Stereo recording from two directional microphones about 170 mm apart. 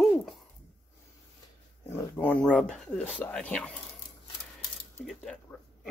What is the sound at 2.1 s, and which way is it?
Speech, 10° left (ahead or behind).